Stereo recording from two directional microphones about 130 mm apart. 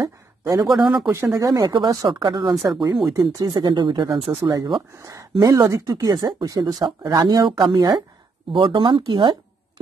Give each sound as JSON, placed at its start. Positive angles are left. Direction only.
{"t": 0.4, "sound": "a man's voice", "side_deg": -25}
{"t": 0.7, "sound": "speech", "side_deg": -10}
{"t": 1.1, "sound": "speech", "side_deg": -20}